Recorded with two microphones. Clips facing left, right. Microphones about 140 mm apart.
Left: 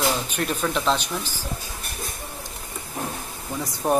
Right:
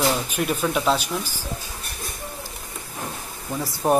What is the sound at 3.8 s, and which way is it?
Speech, 5° right (ahead or behind).